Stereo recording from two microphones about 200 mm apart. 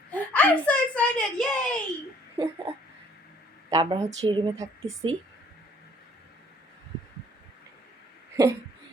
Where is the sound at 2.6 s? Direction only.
25° right (ahead or behind).